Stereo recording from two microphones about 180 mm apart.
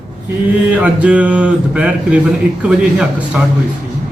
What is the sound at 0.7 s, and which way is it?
A man's voice, 5° right (ahead or behind).